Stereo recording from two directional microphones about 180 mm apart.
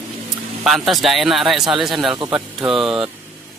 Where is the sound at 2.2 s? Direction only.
25° right (ahead or behind).